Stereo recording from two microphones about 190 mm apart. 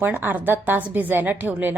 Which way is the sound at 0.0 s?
10° right (ahead or behind).